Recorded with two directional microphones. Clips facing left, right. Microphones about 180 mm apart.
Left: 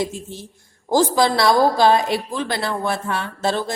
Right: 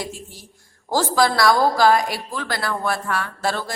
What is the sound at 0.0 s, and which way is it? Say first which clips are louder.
A woman's voice: left 7 dB; 20° left (ahead or behind).